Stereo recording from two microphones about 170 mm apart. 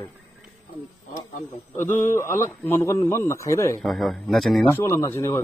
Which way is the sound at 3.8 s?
Centre (ahead or behind).